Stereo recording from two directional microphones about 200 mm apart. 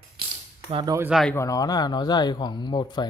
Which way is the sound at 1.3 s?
15° left (ahead or behind).